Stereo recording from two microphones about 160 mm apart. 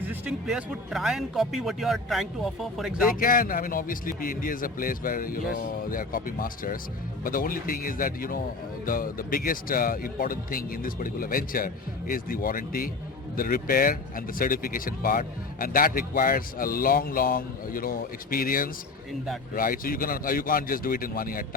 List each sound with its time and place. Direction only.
0.1 s speech: 5° right (ahead or behind)
3.2 s speech: 60° left (ahead or behind)